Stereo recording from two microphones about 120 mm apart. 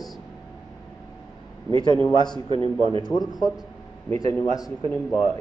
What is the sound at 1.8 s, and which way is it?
Speech, 35° left (ahead or behind).